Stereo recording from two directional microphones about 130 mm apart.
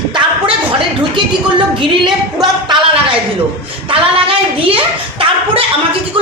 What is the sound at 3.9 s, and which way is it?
Speech, 45° right (ahead or behind).